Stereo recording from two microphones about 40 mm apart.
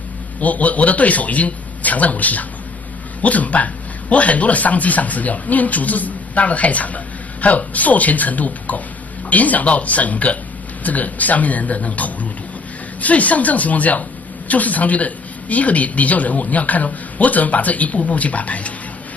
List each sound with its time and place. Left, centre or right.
0.4 s speech: left